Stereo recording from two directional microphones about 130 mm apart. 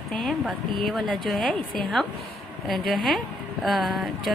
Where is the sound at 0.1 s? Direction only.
Centre (ahead or behind).